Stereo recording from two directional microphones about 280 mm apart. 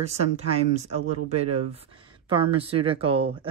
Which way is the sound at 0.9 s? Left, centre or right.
Right.